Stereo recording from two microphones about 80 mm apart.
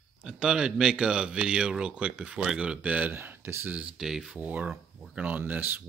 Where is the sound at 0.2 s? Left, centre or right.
Centre; by 3.7 s right.